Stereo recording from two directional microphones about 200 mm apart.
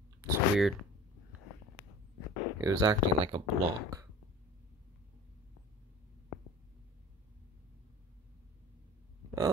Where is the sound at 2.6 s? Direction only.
20° right (ahead or behind).